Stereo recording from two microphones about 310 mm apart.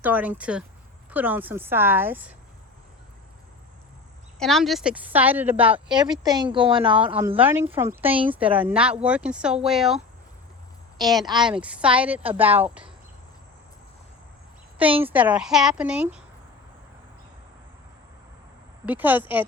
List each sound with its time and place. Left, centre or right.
0.0 s speech: centre
4.4 s a woman's voice: centre
15.0 s speech: centre
18.9 s speech: centre